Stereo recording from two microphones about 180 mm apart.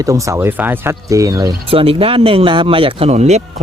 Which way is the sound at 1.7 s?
30° right (ahead or behind).